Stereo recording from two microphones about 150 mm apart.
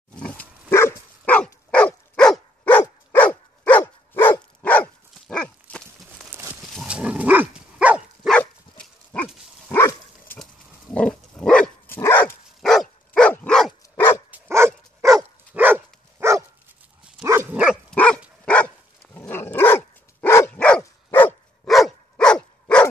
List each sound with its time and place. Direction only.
0.1 s dog: 10° left (ahead or behind)
6.3 s a sound: 15° right (ahead or behind)
6.8 s dog: 5° right (ahead or behind)
8.3 s dog: 10° left (ahead or behind)
12.6 s dog: centre (ahead or behind)
13.9 s dog: 15° left (ahead or behind)
14.3 s dog: 15° right (ahead or behind)
17.9 s dog: 5° left (ahead or behind)
21.6 s dog: centre (ahead or behind)